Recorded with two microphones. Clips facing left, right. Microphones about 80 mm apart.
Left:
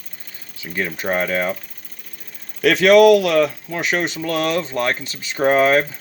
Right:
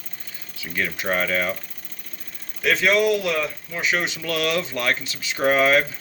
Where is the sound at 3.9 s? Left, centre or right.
Left.